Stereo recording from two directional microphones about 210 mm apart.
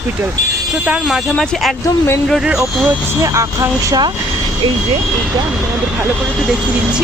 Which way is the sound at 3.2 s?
15° right (ahead or behind).